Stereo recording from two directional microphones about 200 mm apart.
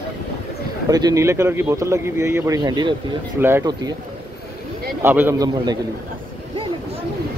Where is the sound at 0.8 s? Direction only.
20° right (ahead or behind).